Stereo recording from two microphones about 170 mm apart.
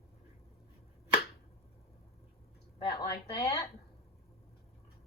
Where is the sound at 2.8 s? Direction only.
25° left (ahead or behind).